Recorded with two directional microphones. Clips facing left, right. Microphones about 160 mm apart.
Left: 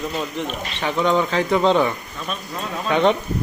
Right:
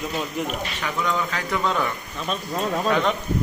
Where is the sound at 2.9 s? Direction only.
30° left (ahead or behind).